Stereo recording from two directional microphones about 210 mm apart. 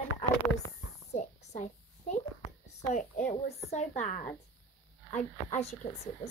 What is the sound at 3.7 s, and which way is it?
A child's voice, 35° left (ahead or behind).